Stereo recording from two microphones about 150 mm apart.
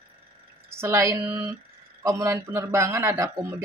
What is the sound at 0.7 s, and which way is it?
Speech, 15° right (ahead or behind).